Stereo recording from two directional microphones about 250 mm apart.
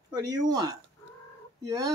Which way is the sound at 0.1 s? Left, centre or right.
Centre.